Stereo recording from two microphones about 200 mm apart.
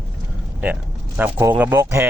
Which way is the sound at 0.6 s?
10° right (ahead or behind).